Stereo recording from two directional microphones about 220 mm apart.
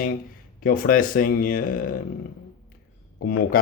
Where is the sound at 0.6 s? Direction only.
40° left (ahead or behind).